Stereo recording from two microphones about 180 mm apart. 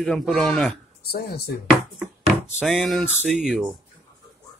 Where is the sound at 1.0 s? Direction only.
60° left (ahead or behind).